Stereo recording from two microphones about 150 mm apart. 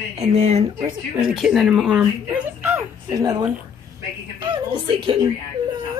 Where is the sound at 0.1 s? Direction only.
45° right (ahead or behind).